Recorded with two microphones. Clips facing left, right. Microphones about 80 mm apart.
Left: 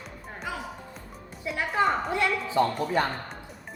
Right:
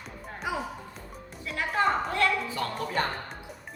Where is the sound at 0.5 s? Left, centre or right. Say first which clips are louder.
Right 3 dB; centre.